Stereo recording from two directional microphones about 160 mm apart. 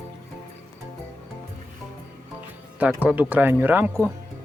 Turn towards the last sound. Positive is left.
turn(degrees=-10)  # may be behind; listen again after turning